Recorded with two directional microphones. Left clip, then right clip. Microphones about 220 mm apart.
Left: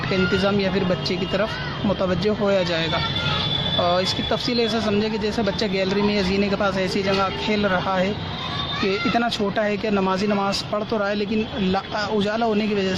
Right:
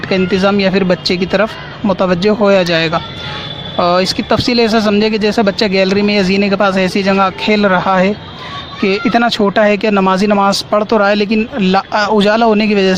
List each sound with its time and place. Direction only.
0.1 s speech: 45° right (ahead or behind)